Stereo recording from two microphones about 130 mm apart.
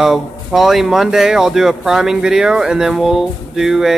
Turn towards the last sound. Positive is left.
turn(degrees=0)  # may be behind; listen again after turning